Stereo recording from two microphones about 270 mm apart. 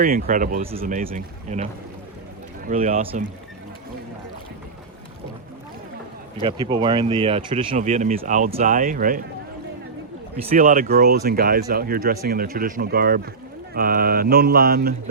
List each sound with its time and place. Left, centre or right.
0.0 s mantra: right
0.8 s speech: right
6.4 s speech: centre
10.5 s mantra: right